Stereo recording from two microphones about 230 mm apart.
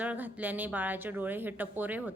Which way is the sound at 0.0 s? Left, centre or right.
Centre.